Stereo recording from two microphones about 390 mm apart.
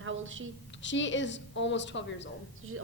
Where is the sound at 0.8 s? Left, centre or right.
Left.